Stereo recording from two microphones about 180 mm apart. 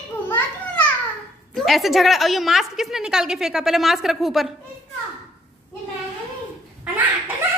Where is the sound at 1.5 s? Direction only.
Centre (ahead or behind).